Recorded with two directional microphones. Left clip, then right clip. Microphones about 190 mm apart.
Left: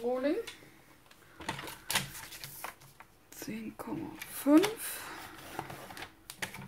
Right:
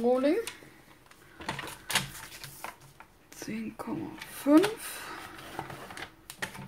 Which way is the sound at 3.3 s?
Centre (ahead or behind).